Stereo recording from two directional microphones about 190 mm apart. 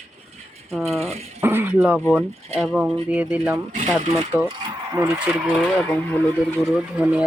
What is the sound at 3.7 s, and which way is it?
Speech, 35° right (ahead or behind).